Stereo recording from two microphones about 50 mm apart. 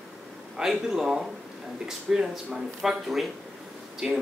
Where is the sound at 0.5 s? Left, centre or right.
Centre.